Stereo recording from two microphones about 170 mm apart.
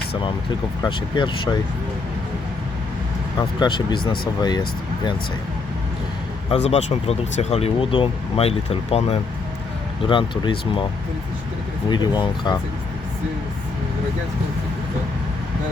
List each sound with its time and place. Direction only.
0.8 s speech: 30° left (ahead or behind)
3.3 s speech: 25° left (ahead or behind)
6.5 s speech: 40° left (ahead or behind)
11.9 s speech: 25° left (ahead or behind)